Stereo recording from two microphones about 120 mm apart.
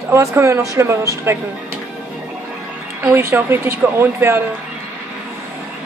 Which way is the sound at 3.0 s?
20° right (ahead or behind).